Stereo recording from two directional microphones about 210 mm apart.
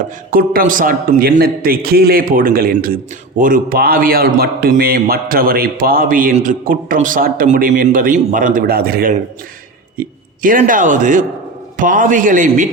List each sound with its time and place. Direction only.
0.0 s a man's voice: 45° right (ahead or behind)